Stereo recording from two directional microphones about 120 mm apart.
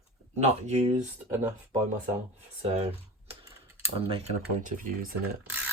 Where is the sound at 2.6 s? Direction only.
60° right (ahead or behind).